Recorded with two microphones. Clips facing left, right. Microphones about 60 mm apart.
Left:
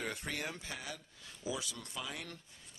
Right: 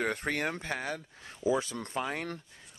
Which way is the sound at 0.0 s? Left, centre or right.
Right.